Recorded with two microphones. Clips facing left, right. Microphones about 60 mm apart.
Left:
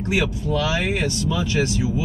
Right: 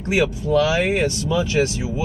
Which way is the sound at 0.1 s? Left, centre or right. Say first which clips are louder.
Right 5 dB; right.